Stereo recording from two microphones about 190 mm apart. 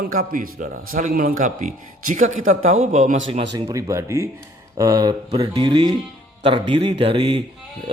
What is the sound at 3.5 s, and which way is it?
A man's voice, 15° right (ahead or behind).